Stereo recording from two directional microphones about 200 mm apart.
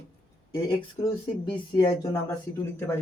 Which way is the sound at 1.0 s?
15° left (ahead or behind).